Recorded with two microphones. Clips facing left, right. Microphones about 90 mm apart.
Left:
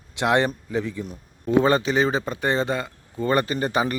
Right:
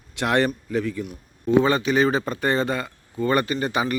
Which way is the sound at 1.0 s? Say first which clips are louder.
Right 2 dB; 35° left (ahead or behind).